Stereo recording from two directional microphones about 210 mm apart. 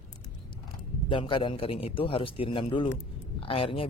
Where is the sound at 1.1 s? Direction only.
25° left (ahead or behind).